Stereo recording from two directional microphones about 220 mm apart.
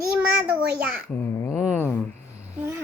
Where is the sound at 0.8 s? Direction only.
5° right (ahead or behind).